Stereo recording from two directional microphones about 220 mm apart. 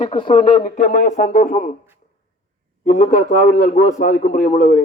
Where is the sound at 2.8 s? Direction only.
40° left (ahead or behind).